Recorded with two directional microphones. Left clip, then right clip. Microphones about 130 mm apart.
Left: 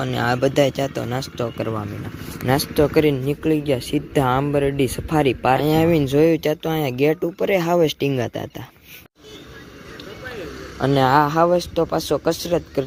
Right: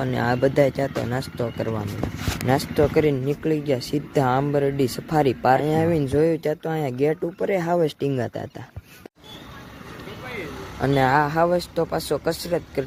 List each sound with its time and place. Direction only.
0.0 s speech: 10° left (ahead or behind)
5.5 s speech: 30° left (ahead or behind)
10.8 s speech: 20° left (ahead or behind)